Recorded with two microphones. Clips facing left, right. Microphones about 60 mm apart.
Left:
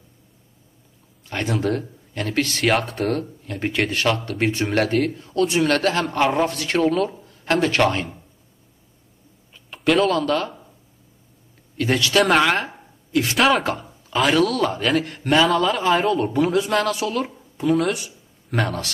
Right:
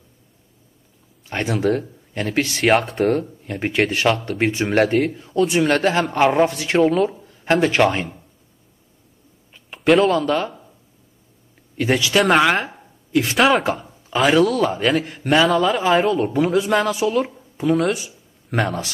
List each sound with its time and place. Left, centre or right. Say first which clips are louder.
1.3 s a man's voice: right 3 dB; right
2.6 s speech: right 5 dB; centre
3.1 s speech: right 4 dB; right
9.8 s speech: right 3 dB; centre
10.1 s speech: right 2 dB; centre
11.7 s speech: right 2 dB; centre
12.2 s a woman's voice: right 1 dB; centre
17.8 s a sound: right 2 dB; centre
18.6 s speech: right 2 dB; centre